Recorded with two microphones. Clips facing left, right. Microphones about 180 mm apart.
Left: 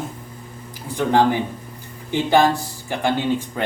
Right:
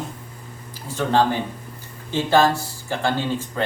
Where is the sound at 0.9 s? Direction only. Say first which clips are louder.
Left 2 dB; 15° left (ahead or behind).